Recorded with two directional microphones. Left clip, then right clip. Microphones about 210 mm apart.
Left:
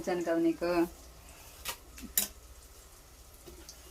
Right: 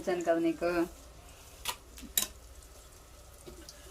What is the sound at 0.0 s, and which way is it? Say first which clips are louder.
Speech: right 1 dB; 10° left (ahead or behind).